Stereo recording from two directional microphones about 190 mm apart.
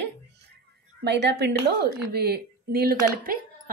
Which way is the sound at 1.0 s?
65° right (ahead or behind).